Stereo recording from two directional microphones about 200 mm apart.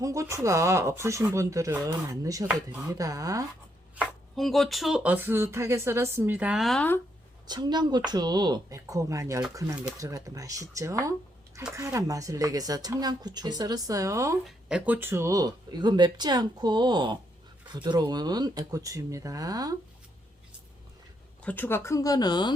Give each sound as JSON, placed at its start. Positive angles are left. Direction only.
{"t": 0.0, "sound": "speech", "side_deg": -15}
{"t": 3.9, "sound": "speech", "side_deg": 0}
{"t": 7.4, "sound": "speech", "side_deg": -20}
{"t": 14.4, "sound": "speech", "side_deg": -5}
{"t": 21.4, "sound": "speech", "side_deg": 10}